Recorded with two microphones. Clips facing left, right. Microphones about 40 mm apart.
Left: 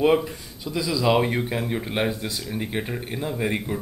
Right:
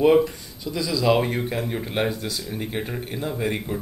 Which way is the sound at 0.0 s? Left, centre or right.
Centre.